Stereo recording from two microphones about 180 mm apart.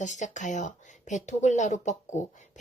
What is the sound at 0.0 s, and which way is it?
Speech, 40° left (ahead or behind).